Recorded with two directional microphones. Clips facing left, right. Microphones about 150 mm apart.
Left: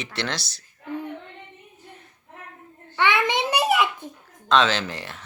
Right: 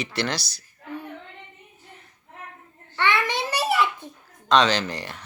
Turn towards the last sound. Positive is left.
turn(degrees=0)  # may be behind; listen again after turning